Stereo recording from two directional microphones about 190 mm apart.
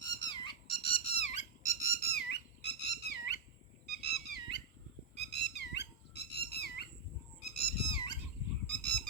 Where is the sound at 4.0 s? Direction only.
60° left (ahead or behind).